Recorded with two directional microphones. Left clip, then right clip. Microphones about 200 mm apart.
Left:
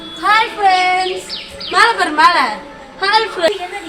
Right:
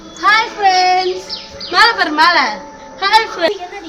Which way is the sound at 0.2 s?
25° right (ahead or behind).